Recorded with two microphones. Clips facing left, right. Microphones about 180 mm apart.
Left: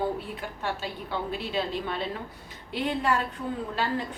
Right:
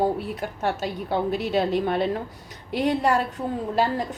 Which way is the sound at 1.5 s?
55° right (ahead or behind).